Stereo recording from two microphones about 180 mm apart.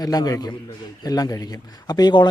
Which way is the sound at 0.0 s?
20° left (ahead or behind).